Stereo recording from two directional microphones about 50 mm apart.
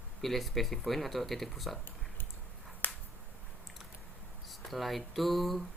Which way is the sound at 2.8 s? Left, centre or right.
Left.